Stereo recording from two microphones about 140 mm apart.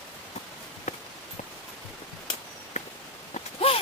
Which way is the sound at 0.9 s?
55° left (ahead or behind).